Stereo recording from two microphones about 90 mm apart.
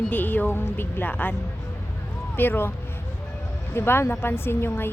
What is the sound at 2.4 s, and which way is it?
Speech, 20° left (ahead or behind).